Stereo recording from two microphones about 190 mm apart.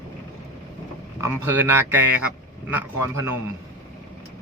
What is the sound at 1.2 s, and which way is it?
A man's voice, 10° right (ahead or behind).